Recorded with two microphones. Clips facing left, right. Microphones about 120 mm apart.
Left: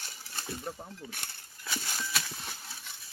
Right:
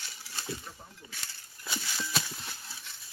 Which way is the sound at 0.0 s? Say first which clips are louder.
Right 1 dB; 45° left (ahead or behind).